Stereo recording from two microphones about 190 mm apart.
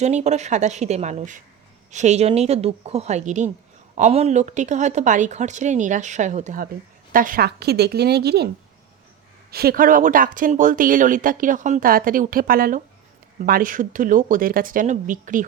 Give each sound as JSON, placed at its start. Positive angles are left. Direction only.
{"t": 0.0, "sound": "a woman's voice", "side_deg": -35}
{"t": 9.5, "sound": "speech", "side_deg": -55}